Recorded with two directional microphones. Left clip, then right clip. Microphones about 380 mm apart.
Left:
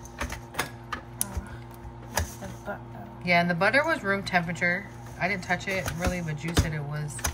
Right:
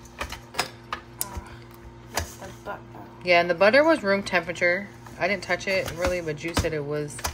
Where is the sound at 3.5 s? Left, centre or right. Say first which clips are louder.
Right 5 dB; right.